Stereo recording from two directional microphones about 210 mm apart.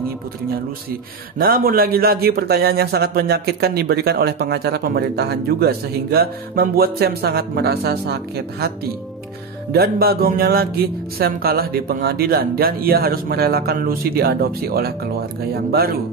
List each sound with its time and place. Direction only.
1.4 s a man's voice: 45° right (ahead or behind)